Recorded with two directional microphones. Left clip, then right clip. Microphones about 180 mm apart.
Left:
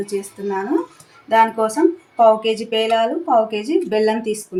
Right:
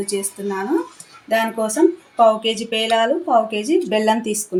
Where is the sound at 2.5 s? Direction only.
20° right (ahead or behind).